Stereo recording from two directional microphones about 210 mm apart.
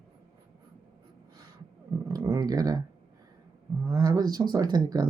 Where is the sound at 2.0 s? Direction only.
15° right (ahead or behind).